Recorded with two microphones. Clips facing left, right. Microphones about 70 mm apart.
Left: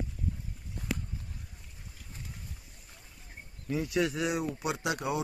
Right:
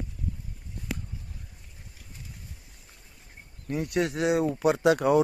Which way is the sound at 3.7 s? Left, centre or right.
Right.